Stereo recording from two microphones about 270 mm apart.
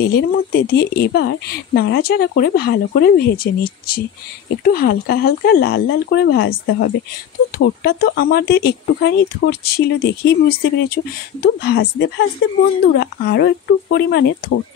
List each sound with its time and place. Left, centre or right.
0.0 s speech: left